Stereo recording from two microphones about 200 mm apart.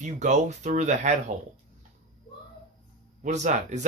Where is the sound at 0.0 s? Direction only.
35° right (ahead or behind).